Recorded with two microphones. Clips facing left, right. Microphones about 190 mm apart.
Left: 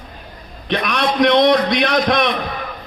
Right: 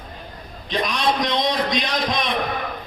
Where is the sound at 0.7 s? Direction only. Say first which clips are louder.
Left 3 dB; 65° left (ahead or behind).